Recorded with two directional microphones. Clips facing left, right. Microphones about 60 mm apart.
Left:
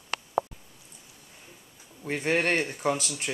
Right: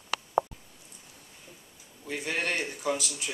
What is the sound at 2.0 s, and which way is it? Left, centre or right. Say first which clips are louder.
Speech: left 6 dB; left.